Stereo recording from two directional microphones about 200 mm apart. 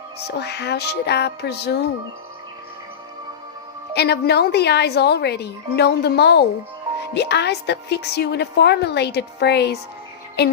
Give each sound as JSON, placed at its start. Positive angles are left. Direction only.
{"t": 0.3, "sound": "a woman's voice", "side_deg": 55}
{"t": 3.9, "sound": "a woman's voice", "side_deg": 55}